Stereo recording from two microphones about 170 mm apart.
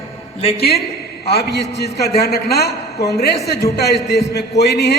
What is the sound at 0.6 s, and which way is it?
A man's voice, 70° left (ahead or behind).